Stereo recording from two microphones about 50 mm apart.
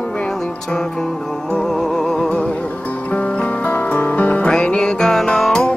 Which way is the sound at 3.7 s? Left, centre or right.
Left.